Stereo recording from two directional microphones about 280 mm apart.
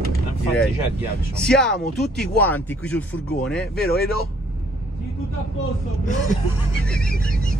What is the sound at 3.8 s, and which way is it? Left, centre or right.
Speech, left.